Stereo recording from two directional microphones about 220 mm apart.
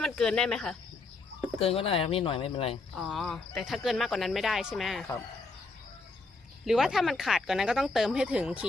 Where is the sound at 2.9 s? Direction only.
Centre (ahead or behind).